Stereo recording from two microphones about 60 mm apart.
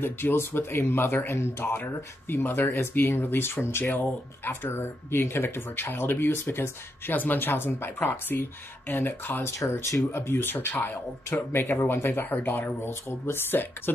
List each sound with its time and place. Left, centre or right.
0.0 s speech: left
9.8 s speech: left